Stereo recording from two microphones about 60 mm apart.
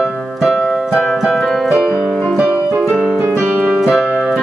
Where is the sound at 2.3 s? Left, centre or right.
Right.